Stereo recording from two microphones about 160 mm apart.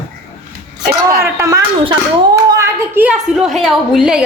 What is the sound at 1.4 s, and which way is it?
A woman's voice, 20° right (ahead or behind).